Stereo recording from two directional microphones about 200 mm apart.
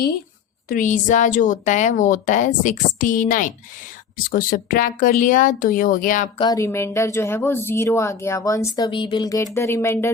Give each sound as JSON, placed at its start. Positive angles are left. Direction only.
{"t": 0.7, "sound": "a woman's voice", "side_deg": 40}
{"t": 6.4, "sound": "speech", "side_deg": 15}